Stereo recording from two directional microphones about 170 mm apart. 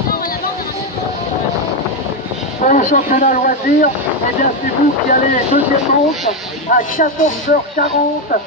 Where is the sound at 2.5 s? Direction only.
50° left (ahead or behind).